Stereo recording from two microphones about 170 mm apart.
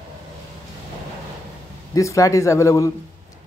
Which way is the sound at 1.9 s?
20° left (ahead or behind).